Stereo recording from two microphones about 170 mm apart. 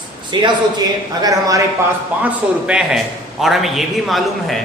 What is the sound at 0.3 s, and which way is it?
A man's voice, 30° right (ahead or behind).